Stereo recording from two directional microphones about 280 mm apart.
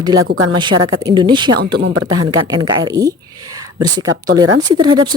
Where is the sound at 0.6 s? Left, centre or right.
Centre.